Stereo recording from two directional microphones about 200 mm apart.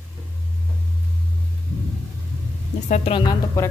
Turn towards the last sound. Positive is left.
turn(degrees=20)  # may be behind; listen again after turning